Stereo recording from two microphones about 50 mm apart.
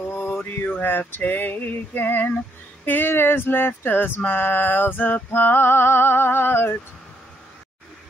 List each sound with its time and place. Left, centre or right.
0.0 s mantra: left
0.8 s a sound: left
2.8 s music: left